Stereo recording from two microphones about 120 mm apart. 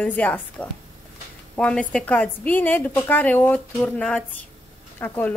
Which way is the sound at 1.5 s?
10° left (ahead or behind).